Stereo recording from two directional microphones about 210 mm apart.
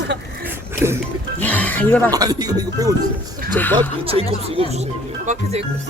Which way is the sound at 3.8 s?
25° right (ahead or behind).